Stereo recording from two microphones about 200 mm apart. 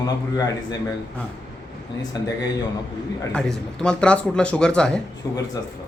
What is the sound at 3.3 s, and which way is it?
Speech, 5° left (ahead or behind).